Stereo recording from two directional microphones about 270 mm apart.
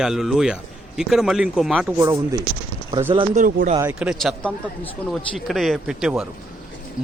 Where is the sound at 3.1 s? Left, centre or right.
Right.